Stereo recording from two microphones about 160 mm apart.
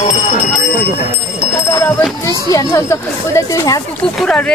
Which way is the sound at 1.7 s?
20° left (ahead or behind).